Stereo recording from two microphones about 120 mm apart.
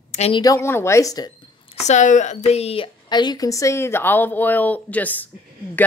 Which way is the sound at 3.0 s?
35° left (ahead or behind).